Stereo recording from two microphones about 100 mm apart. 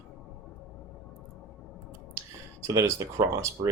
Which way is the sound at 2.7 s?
35° right (ahead or behind).